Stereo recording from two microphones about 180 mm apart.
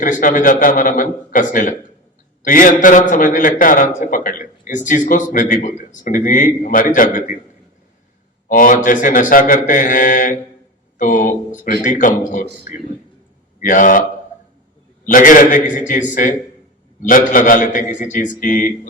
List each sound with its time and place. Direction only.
0.0 s a man's voice: 45° left (ahead or behind)
8.4 s a man's voice: 50° left (ahead or behind)
15.0 s a man's voice: 45° left (ahead or behind)